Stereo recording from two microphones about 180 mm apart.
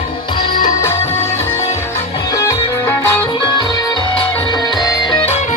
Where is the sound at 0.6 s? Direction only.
15° left (ahead or behind).